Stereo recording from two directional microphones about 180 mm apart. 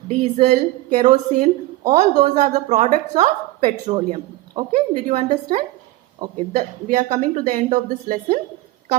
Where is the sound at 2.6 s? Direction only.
40° right (ahead or behind).